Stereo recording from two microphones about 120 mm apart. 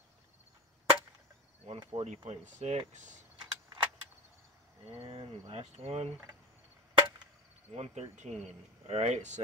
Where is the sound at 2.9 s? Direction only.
90° right.